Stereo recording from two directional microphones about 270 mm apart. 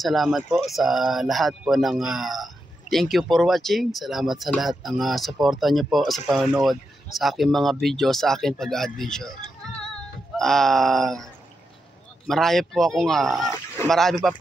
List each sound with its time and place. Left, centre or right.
0.0 s speech: centre
12.3 s speech: centre